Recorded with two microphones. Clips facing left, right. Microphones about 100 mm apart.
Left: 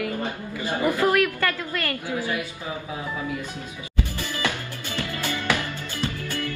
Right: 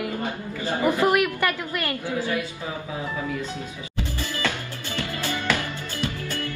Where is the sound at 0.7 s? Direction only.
20° right (ahead or behind).